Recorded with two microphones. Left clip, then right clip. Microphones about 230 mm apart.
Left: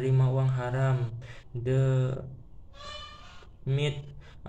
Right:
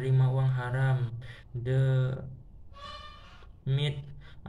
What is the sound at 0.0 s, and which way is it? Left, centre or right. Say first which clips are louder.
Speech: left 3 dB; centre.